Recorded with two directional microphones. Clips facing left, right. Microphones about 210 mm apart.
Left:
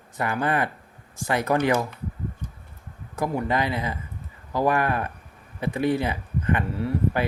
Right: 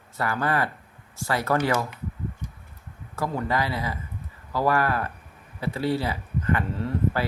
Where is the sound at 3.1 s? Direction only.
15° left (ahead or behind).